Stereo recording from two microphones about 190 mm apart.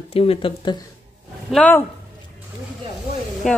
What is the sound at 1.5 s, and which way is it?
Speech, 5° left (ahead or behind).